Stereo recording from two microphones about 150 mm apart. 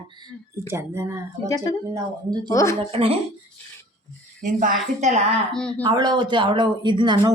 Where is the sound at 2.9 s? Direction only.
40° right (ahead or behind).